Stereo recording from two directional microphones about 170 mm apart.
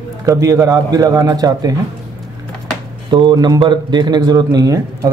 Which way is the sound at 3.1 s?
25° right (ahead or behind).